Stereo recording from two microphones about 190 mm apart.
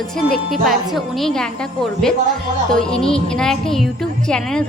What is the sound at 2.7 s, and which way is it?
A woman's voice, 5° left (ahead or behind).